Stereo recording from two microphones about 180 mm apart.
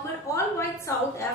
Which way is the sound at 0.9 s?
15° left (ahead or behind).